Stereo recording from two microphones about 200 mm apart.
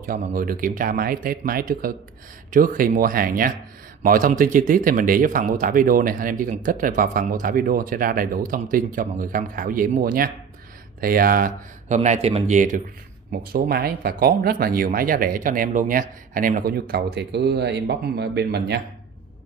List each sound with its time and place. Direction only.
0.0 s speech: 45° right (ahead or behind)